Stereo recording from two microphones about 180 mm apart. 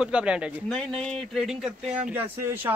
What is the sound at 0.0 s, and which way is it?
A man's voice, 5° right (ahead or behind).